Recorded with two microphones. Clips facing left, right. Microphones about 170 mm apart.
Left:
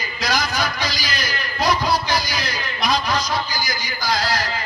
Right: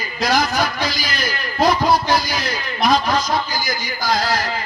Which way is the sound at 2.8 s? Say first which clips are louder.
Right 4 dB; 50° right (ahead or behind).